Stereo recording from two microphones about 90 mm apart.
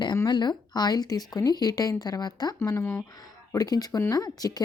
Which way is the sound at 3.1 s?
45° left (ahead or behind).